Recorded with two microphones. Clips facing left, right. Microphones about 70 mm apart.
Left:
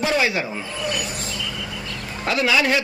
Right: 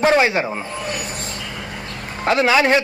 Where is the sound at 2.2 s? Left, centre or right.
Right.